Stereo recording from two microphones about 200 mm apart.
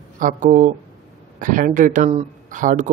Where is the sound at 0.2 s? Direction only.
40° right (ahead or behind).